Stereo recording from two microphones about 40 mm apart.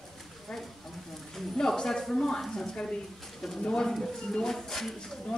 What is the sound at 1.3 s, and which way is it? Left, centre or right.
Speech, centre.